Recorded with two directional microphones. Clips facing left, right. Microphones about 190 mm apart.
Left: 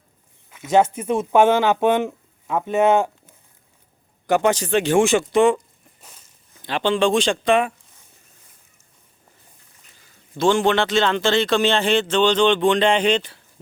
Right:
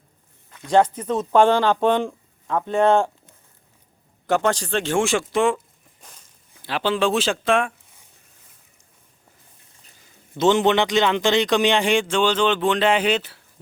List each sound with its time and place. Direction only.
0.5 s speech: 5° left (ahead or behind)
4.3 s speech: 15° left (ahead or behind)
5.0 s speech: centre (ahead or behind)
6.0 s walk: 5° left (ahead or behind)
6.6 s speech: 5° right (ahead or behind)
10.3 s a man's voice: 20° right (ahead or behind)